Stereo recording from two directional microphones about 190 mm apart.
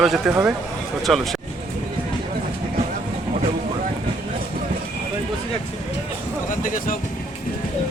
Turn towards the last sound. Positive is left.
turn(degrees=45)  # may be behind; listen again after turning